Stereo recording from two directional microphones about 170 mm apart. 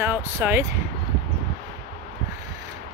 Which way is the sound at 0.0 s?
15° right (ahead or behind).